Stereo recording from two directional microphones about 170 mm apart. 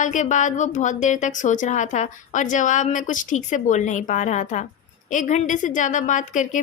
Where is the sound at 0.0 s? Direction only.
45° left (ahead or behind).